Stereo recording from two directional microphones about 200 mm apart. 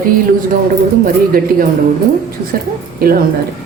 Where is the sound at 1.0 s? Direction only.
45° right (ahead or behind).